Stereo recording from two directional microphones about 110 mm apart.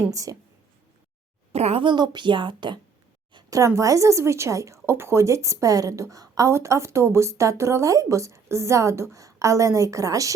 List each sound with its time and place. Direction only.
0.1 s a woman's voice: 30° right (ahead or behind)
1.5 s speech: 70° right (ahead or behind)
1.8 s a woman's voice: 45° right (ahead or behind)
3.5 s a woman's voice: 30° right (ahead or behind)